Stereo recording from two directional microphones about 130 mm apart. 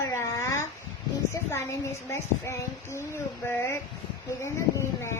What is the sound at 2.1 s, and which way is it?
A woman's voice, 20° left (ahead or behind).